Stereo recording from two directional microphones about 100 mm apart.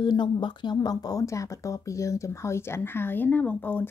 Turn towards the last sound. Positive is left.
turn(degrees=15)  # may be behind; listen again after turning